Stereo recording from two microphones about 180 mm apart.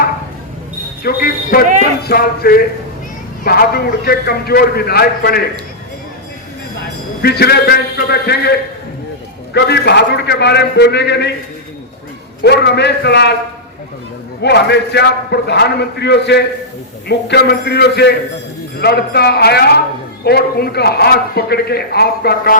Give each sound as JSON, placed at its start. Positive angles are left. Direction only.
{"t": 1.0, "sound": "a sound", "side_deg": 55}
{"t": 3.4, "sound": "speech", "side_deg": 60}
{"t": 7.2, "sound": "a man's voice", "side_deg": 60}
{"t": 12.4, "sound": "a man's voice", "side_deg": 65}
{"t": 14.4, "sound": "a man's voice", "side_deg": 70}